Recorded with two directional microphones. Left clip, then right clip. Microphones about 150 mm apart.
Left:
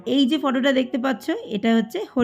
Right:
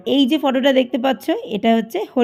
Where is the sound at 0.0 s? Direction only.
20° right (ahead or behind).